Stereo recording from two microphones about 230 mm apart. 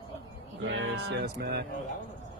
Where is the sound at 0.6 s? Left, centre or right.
Right.